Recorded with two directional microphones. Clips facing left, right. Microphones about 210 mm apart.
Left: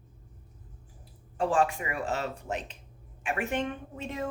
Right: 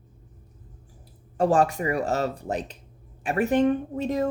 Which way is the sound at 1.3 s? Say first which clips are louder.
Right 5 dB; 40° right (ahead or behind).